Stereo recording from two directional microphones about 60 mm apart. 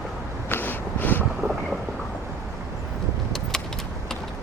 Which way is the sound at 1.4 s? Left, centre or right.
Right.